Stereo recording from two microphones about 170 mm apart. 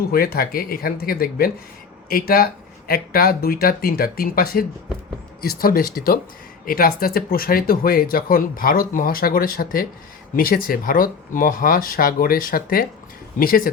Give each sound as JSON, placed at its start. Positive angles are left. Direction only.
{"t": 0.1, "sound": "speech", "side_deg": 60}